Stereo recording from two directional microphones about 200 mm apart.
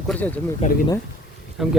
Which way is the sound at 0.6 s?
35° left (ahead or behind).